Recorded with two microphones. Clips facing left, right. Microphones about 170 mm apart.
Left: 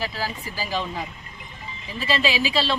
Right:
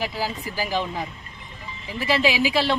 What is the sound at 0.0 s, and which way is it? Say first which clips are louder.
Speech: right 2 dB; 20° right (ahead or behind).